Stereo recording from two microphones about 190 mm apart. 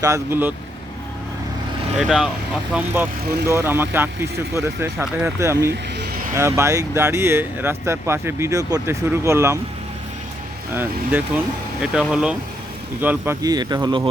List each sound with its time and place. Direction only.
0.0 s speech: 15° right (ahead or behind)
2.0 s speech: centre (ahead or behind)
5.7 s vehicle: 60° right (ahead or behind)
6.3 s speech: 15° right (ahead or behind)
11.8 s speech: 5° right (ahead or behind); by 14.1 s 25° right (ahead or behind)